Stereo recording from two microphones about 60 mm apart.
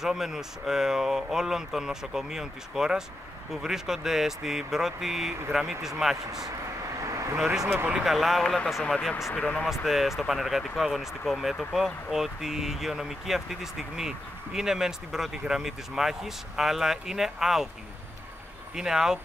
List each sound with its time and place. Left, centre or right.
0.0 s speech: centre
7.0 s vehicle: right
7.3 s speech: centre
9.3 s speech: left
9.7 s speech: centre
18.8 s speech: centre